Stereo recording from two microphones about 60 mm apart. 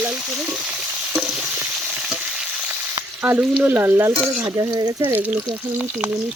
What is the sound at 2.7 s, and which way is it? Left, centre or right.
Frying, right.